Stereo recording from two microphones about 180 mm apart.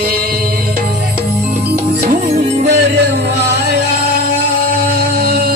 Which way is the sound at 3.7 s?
65° right (ahead or behind).